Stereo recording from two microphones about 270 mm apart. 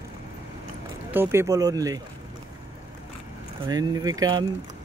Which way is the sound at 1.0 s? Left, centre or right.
Centre.